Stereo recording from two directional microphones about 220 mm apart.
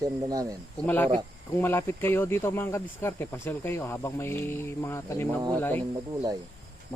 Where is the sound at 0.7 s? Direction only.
5° left (ahead or behind).